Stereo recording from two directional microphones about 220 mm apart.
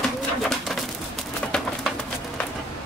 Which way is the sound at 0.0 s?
Centre (ahead or behind).